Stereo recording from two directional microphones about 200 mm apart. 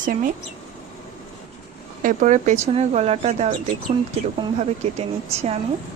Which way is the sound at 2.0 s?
40° right (ahead or behind).